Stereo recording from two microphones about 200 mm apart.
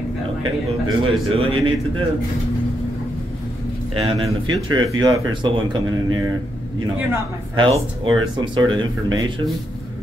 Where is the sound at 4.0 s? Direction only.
30° right (ahead or behind).